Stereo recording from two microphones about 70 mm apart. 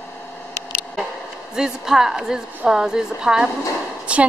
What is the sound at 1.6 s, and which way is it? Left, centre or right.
A woman's voice, centre.